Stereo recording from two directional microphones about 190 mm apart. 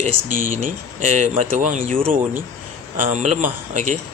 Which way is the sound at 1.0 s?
40° right (ahead or behind).